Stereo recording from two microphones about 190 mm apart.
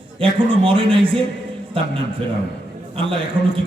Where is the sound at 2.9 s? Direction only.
30° right (ahead or behind).